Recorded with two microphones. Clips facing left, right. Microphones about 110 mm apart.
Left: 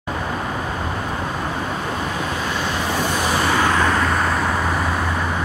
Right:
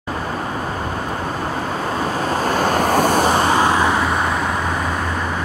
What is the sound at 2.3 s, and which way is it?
Vehicle, 45° right (ahead or behind).